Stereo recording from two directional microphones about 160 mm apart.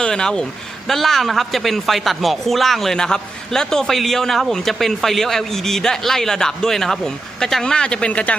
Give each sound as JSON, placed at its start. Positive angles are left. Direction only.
{"t": 0.0, "sound": "speech", "side_deg": 5}